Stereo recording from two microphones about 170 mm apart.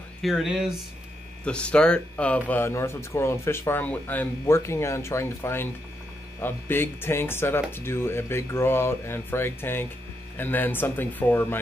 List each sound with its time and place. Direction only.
0.2 s speech: centre (ahead or behind)